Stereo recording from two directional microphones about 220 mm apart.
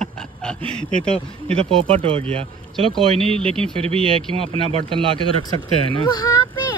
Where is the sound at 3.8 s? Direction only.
25° right (ahead or behind).